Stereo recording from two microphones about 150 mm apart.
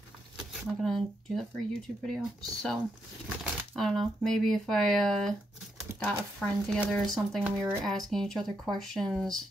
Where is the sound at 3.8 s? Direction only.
5° left (ahead or behind).